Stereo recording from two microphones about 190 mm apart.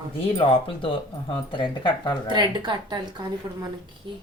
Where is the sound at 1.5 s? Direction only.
25° left (ahead or behind).